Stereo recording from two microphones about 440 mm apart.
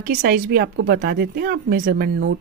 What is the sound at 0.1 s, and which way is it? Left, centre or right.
Speech, right.